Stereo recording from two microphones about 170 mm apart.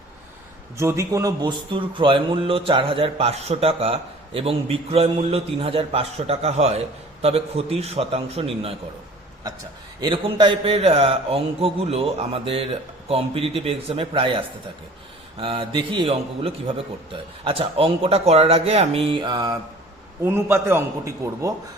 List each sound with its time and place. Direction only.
0.8 s a man's voice: 15° right (ahead or behind); by 8.8 s 35° right (ahead or behind)
10.0 s a man's voice: 30° right (ahead or behind)
20.2 s a man's voice: 15° right (ahead or behind)